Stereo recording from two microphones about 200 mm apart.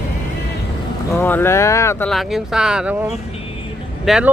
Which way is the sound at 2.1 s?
Centre (ahead or behind).